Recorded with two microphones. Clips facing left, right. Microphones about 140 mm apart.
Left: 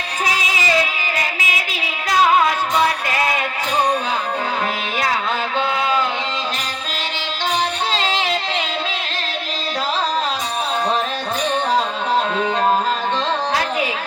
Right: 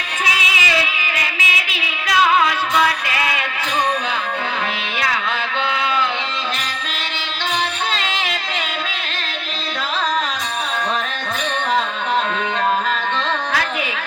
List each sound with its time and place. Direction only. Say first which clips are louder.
0.3 s music: left 3 dB; 40° left (ahead or behind)
7.9 s music: left 4 dB; 35° left (ahead or behind)